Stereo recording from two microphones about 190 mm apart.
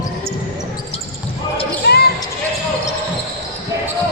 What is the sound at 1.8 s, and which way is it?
Basketball bounce, 65° left (ahead or behind).